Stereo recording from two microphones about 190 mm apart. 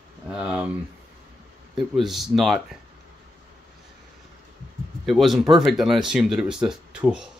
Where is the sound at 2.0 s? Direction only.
Centre (ahead or behind).